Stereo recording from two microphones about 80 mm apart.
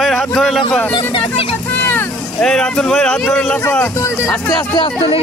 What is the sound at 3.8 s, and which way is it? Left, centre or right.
Speech, left.